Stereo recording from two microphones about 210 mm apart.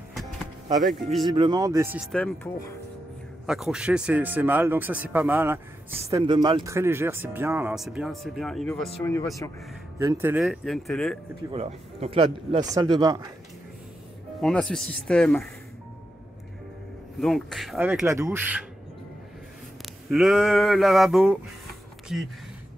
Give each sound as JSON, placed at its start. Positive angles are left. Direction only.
{"t": 1.3, "sound": "a man's voice", "side_deg": -20}
{"t": 2.1, "sound": "speech", "side_deg": 5}
{"t": 3.4, "sound": "a man's voice", "side_deg": -5}
{"t": 9.0, "sound": "speech", "side_deg": 15}
{"t": 9.9, "sound": "a sound", "side_deg": -10}
{"t": 11.5, "sound": "a man's voice", "side_deg": -30}
{"t": 14.4, "sound": "a sound", "side_deg": 0}
{"t": 17.2, "sound": "a man's voice", "side_deg": 0}
{"t": 20.1, "sound": "a sound", "side_deg": 0}